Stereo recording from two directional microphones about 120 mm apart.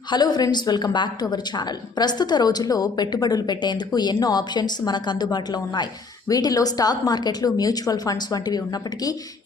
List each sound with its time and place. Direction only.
0.1 s a woman's voice: 35° left (ahead or behind)